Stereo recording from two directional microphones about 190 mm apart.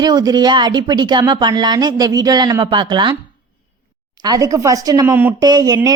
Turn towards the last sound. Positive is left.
turn(degrees=-20)  # may be behind; listen again after turning